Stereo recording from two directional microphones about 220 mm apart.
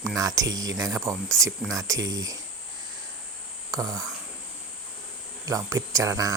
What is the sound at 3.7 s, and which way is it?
Speech, 15° right (ahead or behind).